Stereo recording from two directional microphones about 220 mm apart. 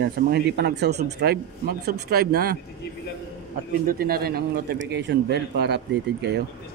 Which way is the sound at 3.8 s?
45° right (ahead or behind).